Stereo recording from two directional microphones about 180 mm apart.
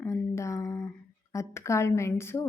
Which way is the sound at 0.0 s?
15° left (ahead or behind).